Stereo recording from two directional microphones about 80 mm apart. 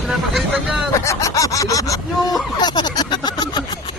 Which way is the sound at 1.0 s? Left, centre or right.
Left.